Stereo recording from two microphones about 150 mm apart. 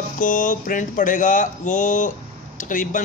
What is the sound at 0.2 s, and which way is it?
A man's voice, 60° left (ahead or behind).